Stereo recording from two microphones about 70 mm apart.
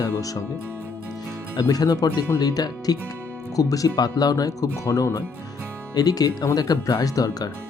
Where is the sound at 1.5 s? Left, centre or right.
Left.